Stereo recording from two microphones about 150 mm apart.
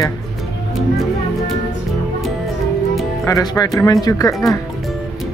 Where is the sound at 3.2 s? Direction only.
20° left (ahead or behind).